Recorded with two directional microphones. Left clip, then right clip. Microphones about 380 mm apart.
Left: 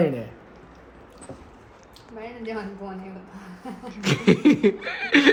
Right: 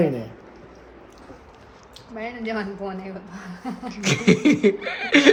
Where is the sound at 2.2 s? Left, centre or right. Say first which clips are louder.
Right 4 dB; right.